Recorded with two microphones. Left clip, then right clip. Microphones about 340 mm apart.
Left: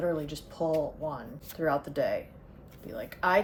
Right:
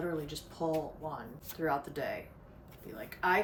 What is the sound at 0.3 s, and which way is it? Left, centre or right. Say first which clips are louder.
A woman's voice: left 5 dB; centre.